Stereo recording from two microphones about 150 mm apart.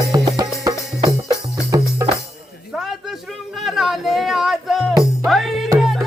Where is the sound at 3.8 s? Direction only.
Centre (ahead or behind).